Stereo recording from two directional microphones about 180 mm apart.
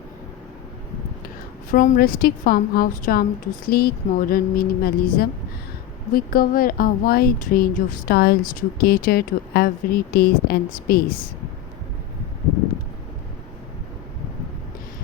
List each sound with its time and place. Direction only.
1.7 s a woman's voice: 45° left (ahead or behind)